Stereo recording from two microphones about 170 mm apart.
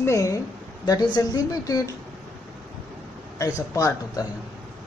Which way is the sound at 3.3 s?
20° left (ahead or behind).